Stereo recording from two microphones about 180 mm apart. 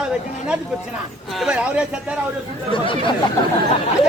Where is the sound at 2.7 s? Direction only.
30° left (ahead or behind).